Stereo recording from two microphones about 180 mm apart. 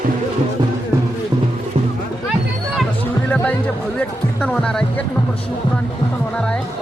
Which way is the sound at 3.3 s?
10° left (ahead or behind).